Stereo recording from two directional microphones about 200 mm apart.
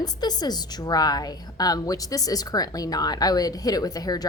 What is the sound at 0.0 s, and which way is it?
A woman's voice, 20° left (ahead or behind).